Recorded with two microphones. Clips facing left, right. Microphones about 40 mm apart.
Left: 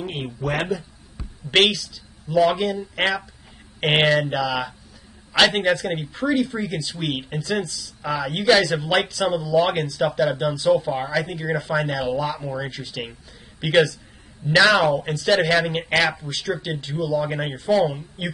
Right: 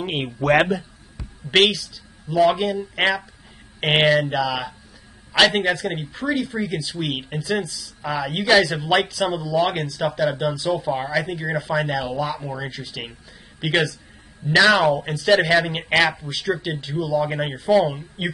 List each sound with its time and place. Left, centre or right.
0.0 s speech: right
1.5 s speech: centre
17.9 s speech: right